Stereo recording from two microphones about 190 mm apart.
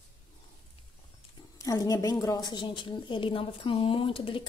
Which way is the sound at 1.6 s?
15° left (ahead or behind).